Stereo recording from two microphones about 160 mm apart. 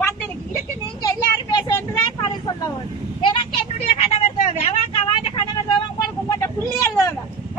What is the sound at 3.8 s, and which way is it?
Vehicle, 40° left (ahead or behind).